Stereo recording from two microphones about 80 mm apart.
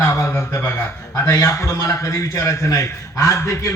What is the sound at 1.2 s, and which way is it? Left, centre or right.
A man's voice, left.